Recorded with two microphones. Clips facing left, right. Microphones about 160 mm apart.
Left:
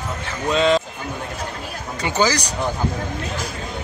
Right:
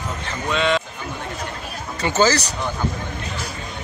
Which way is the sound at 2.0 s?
15° left (ahead or behind).